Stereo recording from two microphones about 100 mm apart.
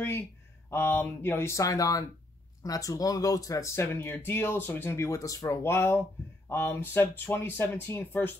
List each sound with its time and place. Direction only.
0.7 s speech: 25° left (ahead or behind)